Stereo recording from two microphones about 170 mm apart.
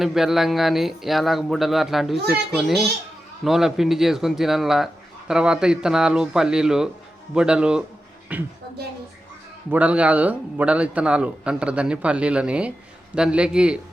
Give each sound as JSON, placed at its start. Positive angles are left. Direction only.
{"t": 0.0, "sound": "a man's voice", "side_deg": 0}
{"t": 9.6, "sound": "a man's voice", "side_deg": -10}